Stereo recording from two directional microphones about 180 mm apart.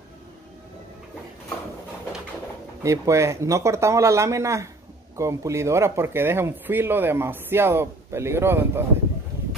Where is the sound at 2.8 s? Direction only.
15° right (ahead or behind).